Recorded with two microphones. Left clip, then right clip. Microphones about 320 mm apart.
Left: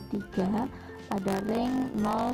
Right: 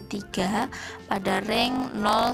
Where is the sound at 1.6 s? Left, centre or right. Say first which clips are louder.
Right 5 dB; right.